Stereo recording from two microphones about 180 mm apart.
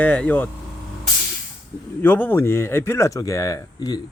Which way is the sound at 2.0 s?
10° left (ahead or behind).